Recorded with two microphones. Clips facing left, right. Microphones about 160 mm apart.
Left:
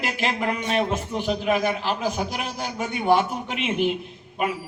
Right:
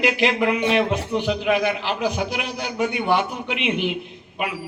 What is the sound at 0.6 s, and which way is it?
Speech, 90° right.